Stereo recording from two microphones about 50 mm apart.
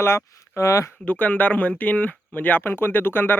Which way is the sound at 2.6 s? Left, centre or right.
Left.